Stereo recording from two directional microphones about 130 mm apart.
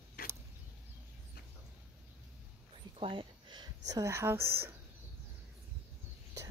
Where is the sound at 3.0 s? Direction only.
45° right (ahead or behind); by 4.7 s 20° right (ahead or behind).